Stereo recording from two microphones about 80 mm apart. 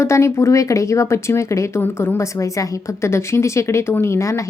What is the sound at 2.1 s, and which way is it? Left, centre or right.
A woman's voice, left.